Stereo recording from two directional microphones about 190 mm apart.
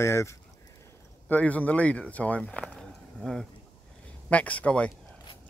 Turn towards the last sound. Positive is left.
turn(degrees=5)  # may be behind; listen again after turning